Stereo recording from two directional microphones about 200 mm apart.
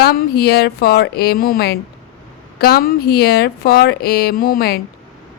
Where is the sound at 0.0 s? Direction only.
50° left (ahead or behind).